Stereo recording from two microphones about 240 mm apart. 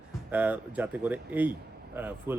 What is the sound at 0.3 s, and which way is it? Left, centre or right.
Speech, centre.